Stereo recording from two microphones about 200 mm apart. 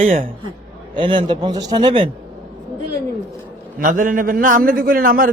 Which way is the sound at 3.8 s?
40° right (ahead or behind).